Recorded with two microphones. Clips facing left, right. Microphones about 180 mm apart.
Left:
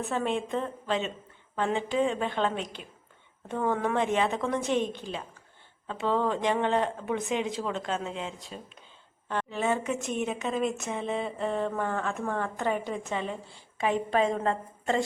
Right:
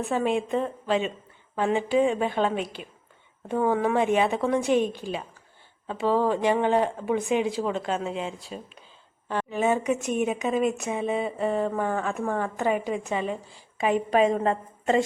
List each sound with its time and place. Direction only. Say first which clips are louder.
0.1 s a woman's voice: right 5 dB; 10° right (ahead or behind)